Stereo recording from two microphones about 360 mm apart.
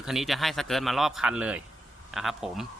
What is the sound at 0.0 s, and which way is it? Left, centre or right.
Speech, centre.